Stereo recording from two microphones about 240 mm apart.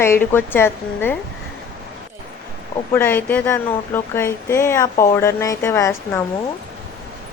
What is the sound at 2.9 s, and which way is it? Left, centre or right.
Speech, centre.